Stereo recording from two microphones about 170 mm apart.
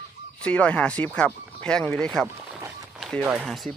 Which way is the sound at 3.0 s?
Centre (ahead or behind).